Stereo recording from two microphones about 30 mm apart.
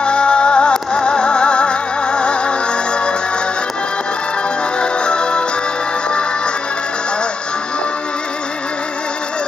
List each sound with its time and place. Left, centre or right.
0.0 s music: left
4.7 s music: left